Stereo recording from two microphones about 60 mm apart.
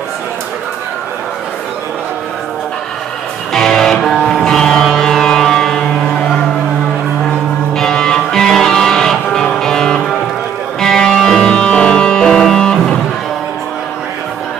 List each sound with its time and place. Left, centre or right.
3.5 s music: centre
7.7 s music: centre
11.4 s music: centre